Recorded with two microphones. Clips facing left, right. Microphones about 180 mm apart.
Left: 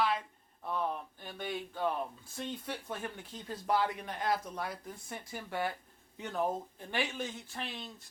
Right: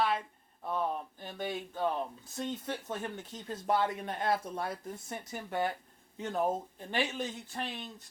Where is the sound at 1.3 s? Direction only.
20° right (ahead or behind).